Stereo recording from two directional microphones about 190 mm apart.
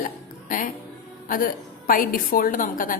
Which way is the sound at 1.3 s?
45° left (ahead or behind).